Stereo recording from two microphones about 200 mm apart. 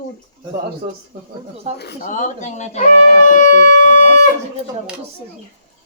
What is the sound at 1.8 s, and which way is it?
Speech, 45° left (ahead or behind).